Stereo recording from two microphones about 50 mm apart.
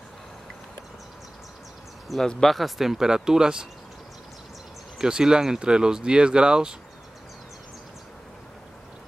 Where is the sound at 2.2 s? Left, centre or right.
Centre.